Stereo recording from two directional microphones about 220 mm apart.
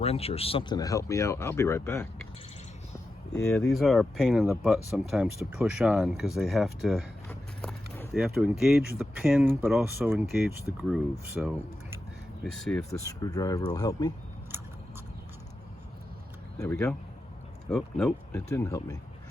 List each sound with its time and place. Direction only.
0.0 s speech: 25° left (ahead or behind); by 2.0 s 10° left (ahead or behind)
3.5 s speech: centre (ahead or behind)
12.9 s speech: 15° left (ahead or behind)
16.6 s speech: 5° left (ahead or behind)